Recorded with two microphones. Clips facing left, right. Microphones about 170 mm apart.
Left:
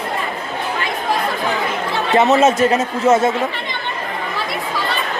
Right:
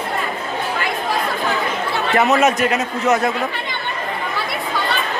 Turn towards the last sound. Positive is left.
turn(degrees=25)  # may be behind; listen again after turning